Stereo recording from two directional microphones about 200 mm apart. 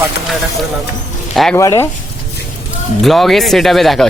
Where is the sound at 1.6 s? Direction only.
15° left (ahead or behind).